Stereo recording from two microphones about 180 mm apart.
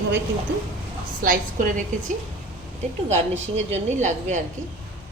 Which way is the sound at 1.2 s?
50° right (ahead or behind).